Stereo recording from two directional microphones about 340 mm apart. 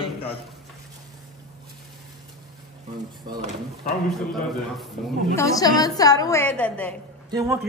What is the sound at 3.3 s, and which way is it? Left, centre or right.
Speech, centre.